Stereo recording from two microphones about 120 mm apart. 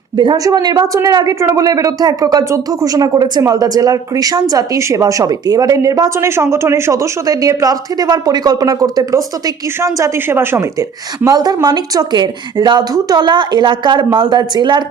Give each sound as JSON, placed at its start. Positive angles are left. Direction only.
{"t": 0.2, "sound": "speech", "side_deg": -35}